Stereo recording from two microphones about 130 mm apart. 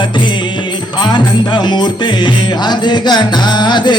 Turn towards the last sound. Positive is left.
turn(degrees=35)  # may be behind; listen again after turning